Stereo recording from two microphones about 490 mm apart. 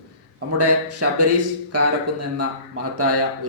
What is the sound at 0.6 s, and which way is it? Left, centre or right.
Speech, right.